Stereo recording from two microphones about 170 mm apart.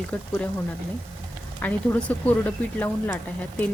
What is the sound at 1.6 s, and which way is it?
A woman's voice, 10° left (ahead or behind).